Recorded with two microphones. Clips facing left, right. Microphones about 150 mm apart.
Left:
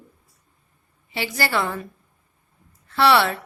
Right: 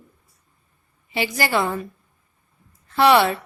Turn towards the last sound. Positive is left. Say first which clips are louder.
# right 2 dB
turn(degrees=-15)  # may be behind; listen again after turning